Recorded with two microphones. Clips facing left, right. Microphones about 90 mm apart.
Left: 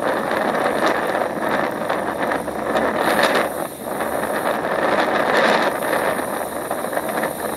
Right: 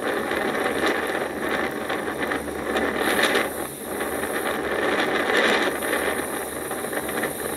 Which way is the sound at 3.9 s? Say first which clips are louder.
Left 5 dB; 30° left (ahead or behind).